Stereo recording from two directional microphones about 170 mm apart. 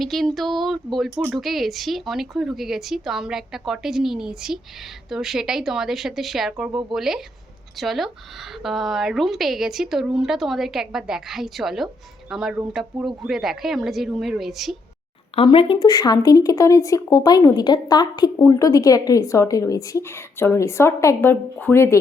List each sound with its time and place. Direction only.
0.0 s speech: centre (ahead or behind)
15.4 s speech: 30° left (ahead or behind); by 21.9 s 15° left (ahead or behind)